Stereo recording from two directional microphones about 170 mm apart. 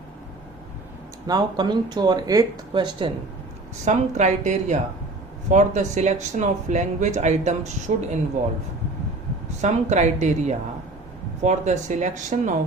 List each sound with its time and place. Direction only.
1.3 s speech: 25° right (ahead or behind)
3.8 s speech: 45° right (ahead or behind)
9.6 s speech: 40° right (ahead or behind)